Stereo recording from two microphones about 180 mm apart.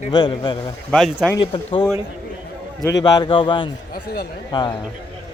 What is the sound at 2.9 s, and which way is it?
Speech, 20° left (ahead or behind).